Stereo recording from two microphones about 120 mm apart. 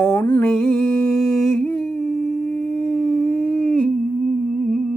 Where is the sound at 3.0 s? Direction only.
10° left (ahead or behind).